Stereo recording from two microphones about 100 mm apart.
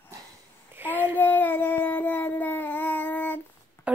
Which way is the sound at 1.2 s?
20° left (ahead or behind).